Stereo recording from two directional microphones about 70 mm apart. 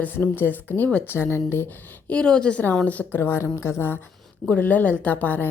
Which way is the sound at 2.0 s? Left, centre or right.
Centre.